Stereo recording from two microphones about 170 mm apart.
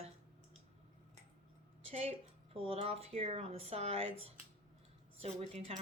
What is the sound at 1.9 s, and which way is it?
Speech, 35° right (ahead or behind).